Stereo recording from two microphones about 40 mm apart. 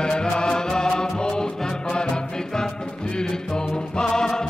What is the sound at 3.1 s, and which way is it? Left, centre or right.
Music, centre.